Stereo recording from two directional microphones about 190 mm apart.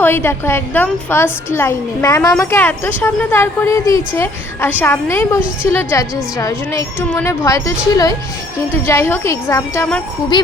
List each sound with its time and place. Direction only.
0.0 s speech: 10° left (ahead or behind)
10.3 s speech: 25° left (ahead or behind)